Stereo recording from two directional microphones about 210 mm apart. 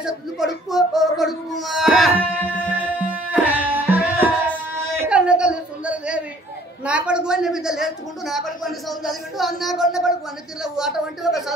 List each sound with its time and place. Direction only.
0.0 s a woman's voice: centre (ahead or behind)
3.3 s music: 10° right (ahead or behind)
5.0 s a sound: 5° right (ahead or behind)
6.8 s a woman's voice: 5° right (ahead or behind)